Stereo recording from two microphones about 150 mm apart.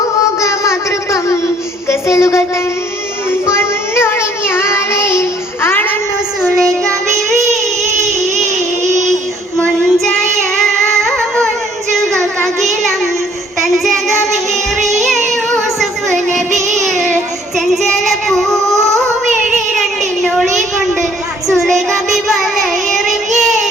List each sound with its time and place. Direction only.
0.3 s a sound: 20° left (ahead or behind)
3.4 s child singing: 15° left (ahead or behind)
9.6 s child singing: 5° left (ahead or behind)
16.5 s music: 50° right (ahead or behind)
18.3 s child singing: centre (ahead or behind)
21.6 s child singing: centre (ahead or behind)